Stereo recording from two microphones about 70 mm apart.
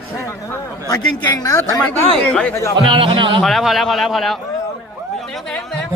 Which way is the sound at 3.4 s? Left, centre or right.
Centre.